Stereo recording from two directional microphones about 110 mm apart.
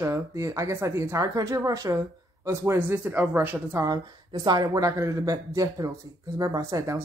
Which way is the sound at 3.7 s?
35° right (ahead or behind).